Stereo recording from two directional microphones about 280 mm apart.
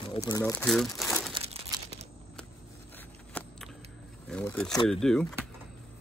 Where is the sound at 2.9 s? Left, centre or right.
Centre.